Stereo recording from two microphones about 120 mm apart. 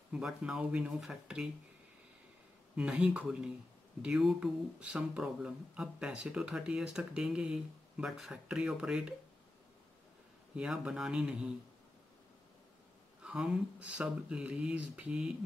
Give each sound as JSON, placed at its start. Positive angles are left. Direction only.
{"t": 0.1, "sound": "speech", "side_deg": -5}
{"t": 2.7, "sound": "speech", "side_deg": -10}
{"t": 10.5, "sound": "speech", "side_deg": -5}
{"t": 13.2, "sound": "speech", "side_deg": -5}